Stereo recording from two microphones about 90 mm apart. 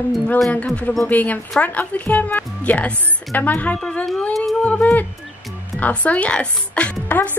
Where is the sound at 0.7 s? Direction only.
15° left (ahead or behind).